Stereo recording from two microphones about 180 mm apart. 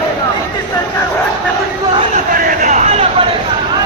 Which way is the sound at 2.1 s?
50° right (ahead or behind).